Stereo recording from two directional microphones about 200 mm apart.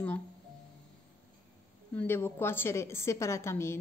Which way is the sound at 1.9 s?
10° left (ahead or behind).